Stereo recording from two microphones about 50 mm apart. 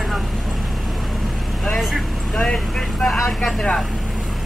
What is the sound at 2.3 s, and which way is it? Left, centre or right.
Speech, centre.